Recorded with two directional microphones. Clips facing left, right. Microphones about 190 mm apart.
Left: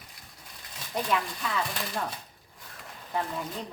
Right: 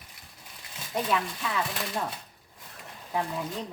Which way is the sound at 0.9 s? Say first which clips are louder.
Right 1 dB; 5° right (ahead or behind).